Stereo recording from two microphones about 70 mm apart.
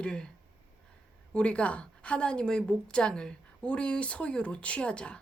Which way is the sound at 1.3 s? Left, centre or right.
Centre.